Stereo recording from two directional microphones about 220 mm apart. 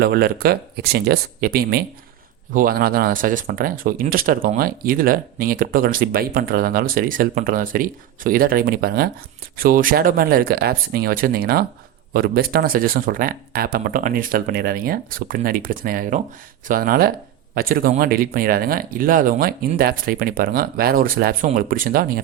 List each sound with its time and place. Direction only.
0.0 s speech: 45° right (ahead or behind)